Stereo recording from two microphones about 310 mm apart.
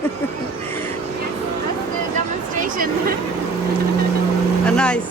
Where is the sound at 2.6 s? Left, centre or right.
Right.